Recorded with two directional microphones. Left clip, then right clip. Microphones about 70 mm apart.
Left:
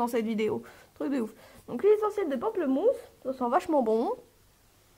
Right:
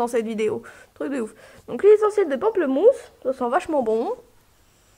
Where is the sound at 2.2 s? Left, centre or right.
Right.